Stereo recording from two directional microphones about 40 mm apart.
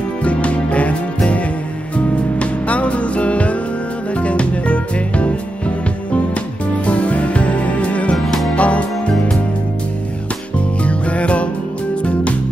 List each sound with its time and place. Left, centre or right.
0.2 s music: left
6.9 s music: left
10.8 s music: left